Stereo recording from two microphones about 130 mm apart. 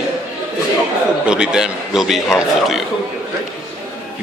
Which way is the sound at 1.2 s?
5° right (ahead or behind).